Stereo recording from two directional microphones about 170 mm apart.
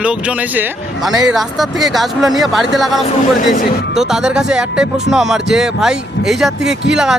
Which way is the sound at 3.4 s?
50° left (ahead or behind).